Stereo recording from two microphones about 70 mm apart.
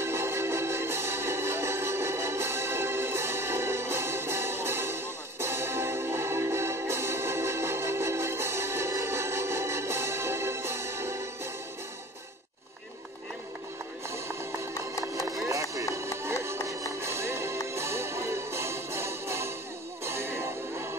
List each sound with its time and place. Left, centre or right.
0.0 s music: right
15.4 s music: right